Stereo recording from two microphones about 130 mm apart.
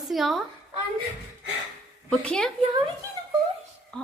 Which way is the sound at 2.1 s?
5° left (ahead or behind).